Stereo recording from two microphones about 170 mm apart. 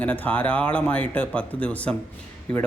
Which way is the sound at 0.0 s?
10° left (ahead or behind).